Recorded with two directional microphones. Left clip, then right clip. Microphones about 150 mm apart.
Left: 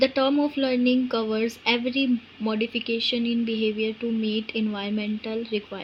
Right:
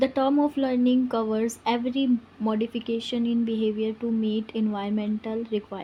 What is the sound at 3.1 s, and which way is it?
Speech, 20° right (ahead or behind).